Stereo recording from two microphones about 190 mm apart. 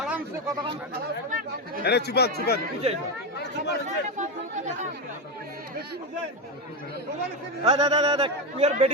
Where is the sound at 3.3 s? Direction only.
60° left (ahead or behind).